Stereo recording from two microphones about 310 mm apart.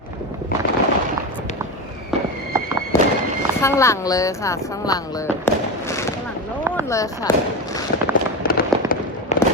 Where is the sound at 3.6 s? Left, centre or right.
Centre.